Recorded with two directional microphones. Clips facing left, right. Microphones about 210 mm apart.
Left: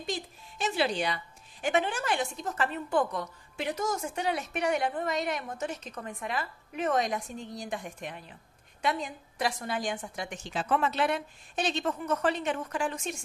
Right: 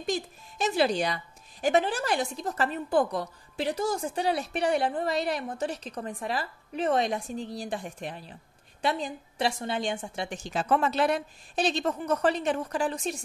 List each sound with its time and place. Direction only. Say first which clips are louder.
0.0 s speech: right 5 dB; 45° right (ahead or behind)